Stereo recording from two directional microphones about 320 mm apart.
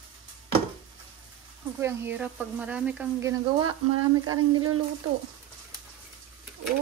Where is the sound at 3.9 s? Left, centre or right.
Right.